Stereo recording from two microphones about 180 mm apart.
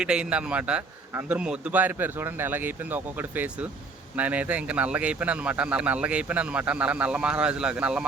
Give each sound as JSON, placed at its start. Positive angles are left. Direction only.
{"t": 0.0, "sound": "speech", "side_deg": -5}